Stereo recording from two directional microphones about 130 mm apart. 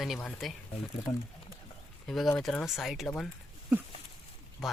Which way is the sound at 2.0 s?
5° left (ahead or behind).